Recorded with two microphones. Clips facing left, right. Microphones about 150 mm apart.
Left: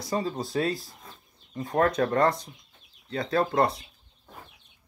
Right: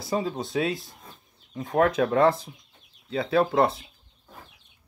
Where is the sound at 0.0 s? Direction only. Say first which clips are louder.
Right 1 dB; centre (ahead or behind).